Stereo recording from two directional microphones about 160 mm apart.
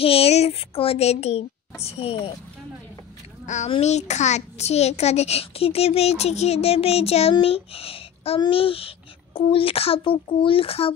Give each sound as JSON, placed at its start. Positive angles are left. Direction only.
{"t": 0.0, "sound": "a child's voice", "side_deg": 35}
{"t": 3.4, "sound": "a child's voice", "side_deg": 50}